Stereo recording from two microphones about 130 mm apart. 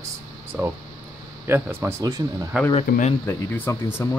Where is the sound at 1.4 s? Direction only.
20° right (ahead or behind).